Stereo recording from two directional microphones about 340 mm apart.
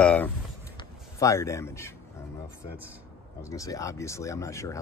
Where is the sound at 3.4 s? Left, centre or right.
Centre.